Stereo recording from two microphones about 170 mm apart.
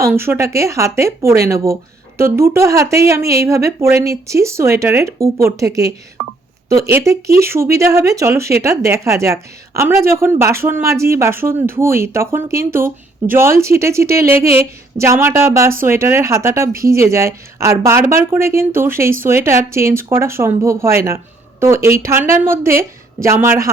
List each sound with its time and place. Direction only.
0.0 s a woman's voice: 15° right (ahead or behind)